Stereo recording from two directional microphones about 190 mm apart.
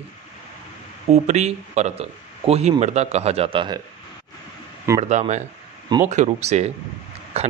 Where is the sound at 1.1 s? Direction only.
35° right (ahead or behind).